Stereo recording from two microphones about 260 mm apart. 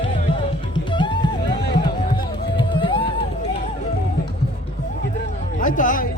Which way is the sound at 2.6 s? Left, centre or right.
Centre.